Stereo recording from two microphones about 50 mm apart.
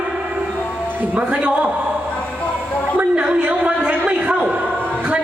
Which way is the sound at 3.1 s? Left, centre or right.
Right.